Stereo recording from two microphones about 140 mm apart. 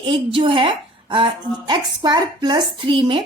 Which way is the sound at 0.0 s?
40° right (ahead or behind).